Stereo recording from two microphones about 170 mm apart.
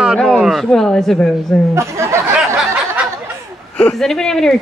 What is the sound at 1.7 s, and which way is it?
Speech, 15° right (ahead or behind).